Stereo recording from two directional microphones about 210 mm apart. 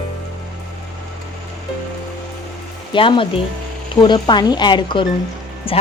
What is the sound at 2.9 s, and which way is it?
Speech, 25° left (ahead or behind).